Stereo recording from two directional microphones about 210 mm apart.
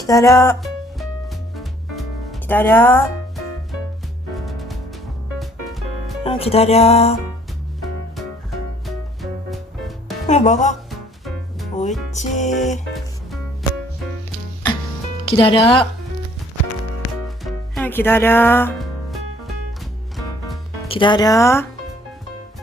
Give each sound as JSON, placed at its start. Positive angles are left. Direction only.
{"t": 0.1, "sound": "speech", "side_deg": 15}
{"t": 0.6, "sound": "music", "side_deg": 0}
{"t": 4.4, "sound": "music", "side_deg": 0}
{"t": 6.2, "sound": "speech", "side_deg": 25}
{"t": 7.8, "sound": "music", "side_deg": 0}
{"t": 10.2, "sound": "music", "side_deg": 35}
{"t": 12.1, "sound": "music", "side_deg": 35}
{"t": 12.9, "sound": "music", "side_deg": 0}
{"t": 15.3, "sound": "speech", "side_deg": 25}
{"t": 17.2, "sound": "music", "side_deg": 0}
{"t": 20.8, "sound": "speech", "side_deg": 25}